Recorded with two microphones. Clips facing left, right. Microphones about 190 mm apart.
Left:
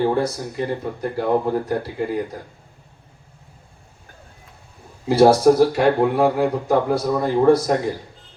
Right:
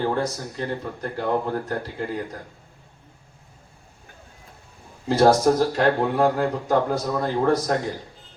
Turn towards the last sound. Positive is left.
turn(degrees=10)  # may be behind; listen again after turning